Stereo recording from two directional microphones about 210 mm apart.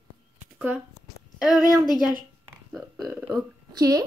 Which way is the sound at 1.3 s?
Centre (ahead or behind).